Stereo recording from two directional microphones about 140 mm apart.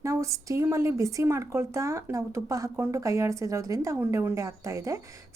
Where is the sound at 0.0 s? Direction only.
20° right (ahead or behind).